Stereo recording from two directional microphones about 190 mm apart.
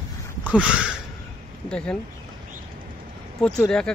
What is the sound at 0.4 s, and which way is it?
Speech, 5° right (ahead or behind).